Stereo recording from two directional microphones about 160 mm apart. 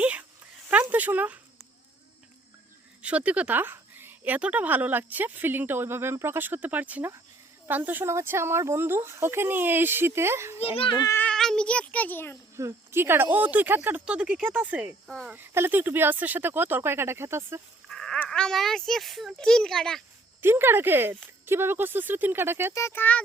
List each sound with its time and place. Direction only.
0.0 s a sound: 10° right (ahead or behind)
3.0 s speech: 10° right (ahead or behind)
10.6 s a child's voice: 35° left (ahead or behind)
11.0 s speech: 15° left (ahead or behind)
12.5 s speech: 15° right (ahead or behind); by 15.4 s centre (ahead or behind)
15.4 s speech: 15° right (ahead or behind)
17.8 s speech: 5° left (ahead or behind)
20.4 s speech: 15° right (ahead or behind)
22.7 s a child's voice: 15° left (ahead or behind)